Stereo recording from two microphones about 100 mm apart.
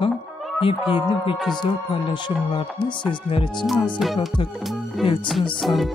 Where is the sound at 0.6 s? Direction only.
60° left (ahead or behind).